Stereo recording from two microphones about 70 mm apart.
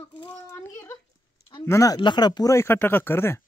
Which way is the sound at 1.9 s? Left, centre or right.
Left.